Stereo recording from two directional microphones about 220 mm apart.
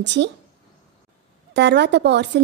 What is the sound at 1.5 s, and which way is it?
Speech, 50° right (ahead or behind).